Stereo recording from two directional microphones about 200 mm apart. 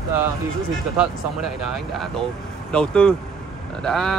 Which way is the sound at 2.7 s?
5° left (ahead or behind).